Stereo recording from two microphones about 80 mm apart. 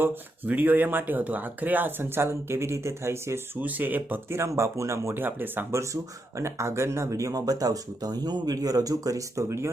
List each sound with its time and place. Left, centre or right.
0.0 s speech: right
3.6 s speech: right
5.8 s speech: right